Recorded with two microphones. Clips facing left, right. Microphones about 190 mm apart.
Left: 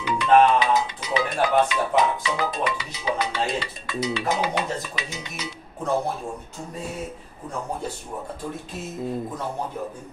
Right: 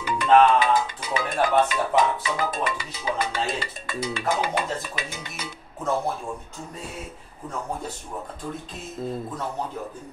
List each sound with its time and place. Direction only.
0.0 s music: 50° right (ahead or behind)